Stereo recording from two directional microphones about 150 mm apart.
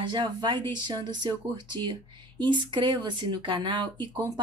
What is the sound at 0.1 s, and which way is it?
A woman's voice, 30° right (ahead or behind).